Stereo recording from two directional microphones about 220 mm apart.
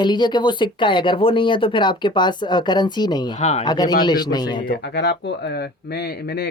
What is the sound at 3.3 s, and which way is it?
Speech, 35° left (ahead or behind).